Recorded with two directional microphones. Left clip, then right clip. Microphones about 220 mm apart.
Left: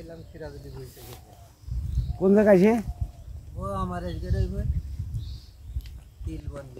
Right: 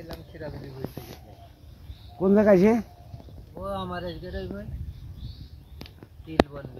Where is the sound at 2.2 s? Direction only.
35° right (ahead or behind).